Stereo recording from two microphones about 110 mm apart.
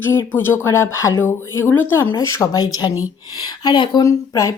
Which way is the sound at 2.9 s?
15° right (ahead or behind).